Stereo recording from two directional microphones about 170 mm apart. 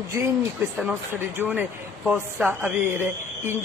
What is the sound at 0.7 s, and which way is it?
Speech, 10° right (ahead or behind).